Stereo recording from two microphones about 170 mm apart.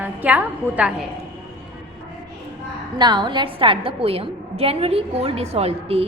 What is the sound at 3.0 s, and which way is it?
A woman's voice, 25° right (ahead or behind).